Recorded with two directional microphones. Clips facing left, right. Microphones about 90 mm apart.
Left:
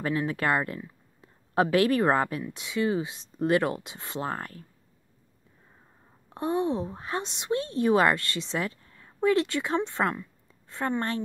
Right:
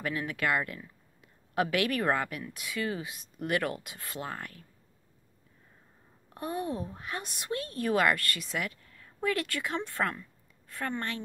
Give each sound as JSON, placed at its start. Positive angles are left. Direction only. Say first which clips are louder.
{"t": 0.0, "sound": "speech", "louder": "left 4 dB", "side_deg": 30}
{"t": 6.3, "sound": "speech", "louder": "left 7 dB", "side_deg": 25}